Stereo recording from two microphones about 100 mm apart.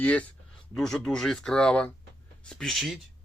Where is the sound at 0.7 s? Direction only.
5° left (ahead or behind).